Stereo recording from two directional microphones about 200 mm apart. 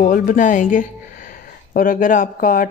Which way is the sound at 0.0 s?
40° left (ahead or behind).